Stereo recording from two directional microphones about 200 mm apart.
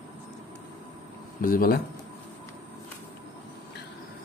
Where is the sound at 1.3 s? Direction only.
45° left (ahead or behind).